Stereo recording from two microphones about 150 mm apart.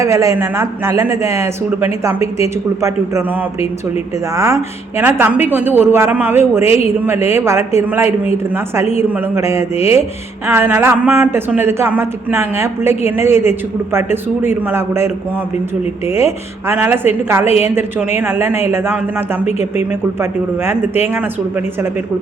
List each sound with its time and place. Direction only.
0.0 s a man's voice: 20° right (ahead or behind)
4.4 s speech: 20° right (ahead or behind)
19.5 s speech: 45° left (ahead or behind)